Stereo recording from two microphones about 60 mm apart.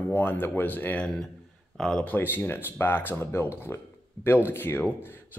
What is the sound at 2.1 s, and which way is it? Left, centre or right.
Speech, left.